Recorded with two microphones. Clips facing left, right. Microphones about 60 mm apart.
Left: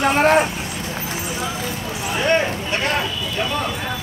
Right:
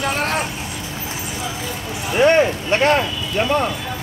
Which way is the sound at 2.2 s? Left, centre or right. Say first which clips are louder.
Right 5 dB; right.